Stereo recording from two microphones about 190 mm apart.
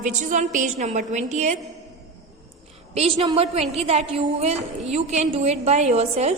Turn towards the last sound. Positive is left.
turn(degrees=-35)  # may be behind; listen again after turning